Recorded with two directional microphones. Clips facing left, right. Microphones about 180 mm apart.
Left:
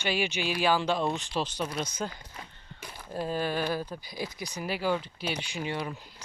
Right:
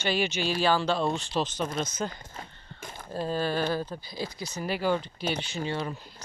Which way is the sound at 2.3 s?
45° right (ahead or behind).